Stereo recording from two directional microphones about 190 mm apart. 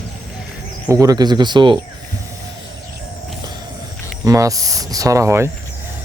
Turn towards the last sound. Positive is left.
turn(degrees=-15)  # may be behind; listen again after turning